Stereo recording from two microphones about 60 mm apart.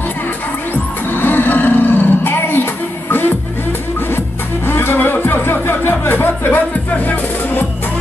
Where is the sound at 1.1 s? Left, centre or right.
Left.